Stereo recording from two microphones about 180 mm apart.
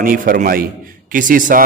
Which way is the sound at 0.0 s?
50° right (ahead or behind).